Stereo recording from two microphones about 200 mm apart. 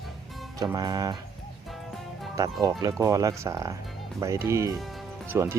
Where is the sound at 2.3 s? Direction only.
20° right (ahead or behind).